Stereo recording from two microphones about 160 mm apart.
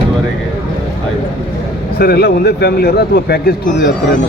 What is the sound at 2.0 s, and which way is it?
Speech, 80° left.